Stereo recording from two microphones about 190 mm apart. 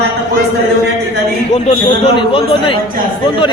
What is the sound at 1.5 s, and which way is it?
A man's voice, 35° left (ahead or behind).